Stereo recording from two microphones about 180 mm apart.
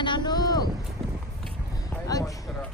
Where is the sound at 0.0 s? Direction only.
25° left (ahead or behind).